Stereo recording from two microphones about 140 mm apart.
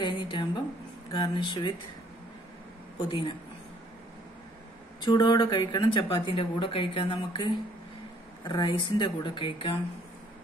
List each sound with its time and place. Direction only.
0.0 s a sound: 35° left (ahead or behind)
1.1 s speech: 35° left (ahead or behind)
3.1 s speech: 40° left (ahead or behind)
5.0 s speech: 30° left (ahead or behind)